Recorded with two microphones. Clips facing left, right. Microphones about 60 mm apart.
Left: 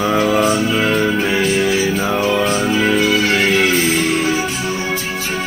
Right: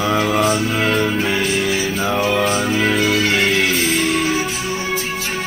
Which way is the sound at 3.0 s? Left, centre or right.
Left.